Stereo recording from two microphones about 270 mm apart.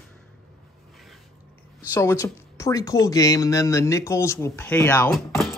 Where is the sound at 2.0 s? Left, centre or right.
Centre.